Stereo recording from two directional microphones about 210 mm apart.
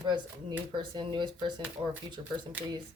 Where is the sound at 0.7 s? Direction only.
20° right (ahead or behind).